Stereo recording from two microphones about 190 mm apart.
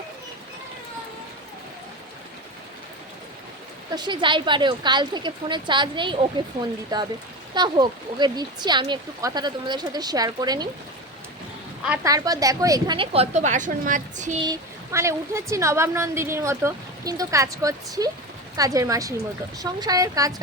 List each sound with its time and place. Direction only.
3.9 s speech: 25° right (ahead or behind)
12.0 s speech: 20° right (ahead or behind); by 14.3 s 40° right (ahead or behind)
14.4 s a woman's voice: 15° right (ahead or behind)